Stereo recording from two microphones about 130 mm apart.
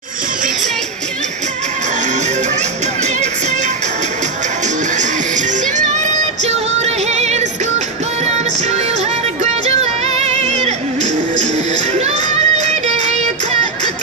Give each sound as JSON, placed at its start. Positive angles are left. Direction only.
{"t": 4.9, "sound": "music", "side_deg": -70}
{"t": 9.4, "sound": "music", "side_deg": -55}
{"t": 11.9, "sound": "child singing", "side_deg": -60}